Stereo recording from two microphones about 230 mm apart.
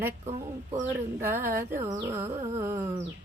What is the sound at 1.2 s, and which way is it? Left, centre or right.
Speech, centre.